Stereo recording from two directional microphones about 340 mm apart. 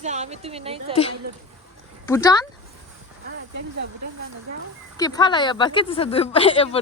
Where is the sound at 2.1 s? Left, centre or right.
Centre.